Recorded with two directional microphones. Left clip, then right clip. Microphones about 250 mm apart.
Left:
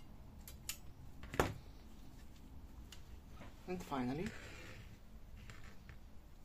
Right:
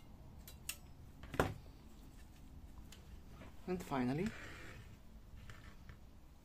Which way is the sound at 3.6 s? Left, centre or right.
Centre.